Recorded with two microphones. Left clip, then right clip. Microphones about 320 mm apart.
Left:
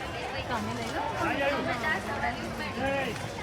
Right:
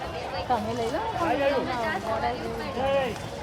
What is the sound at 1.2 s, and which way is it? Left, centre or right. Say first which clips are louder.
Speech: right 4 dB; right.